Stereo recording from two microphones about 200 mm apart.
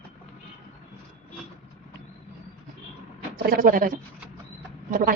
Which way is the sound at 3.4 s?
45° right (ahead or behind).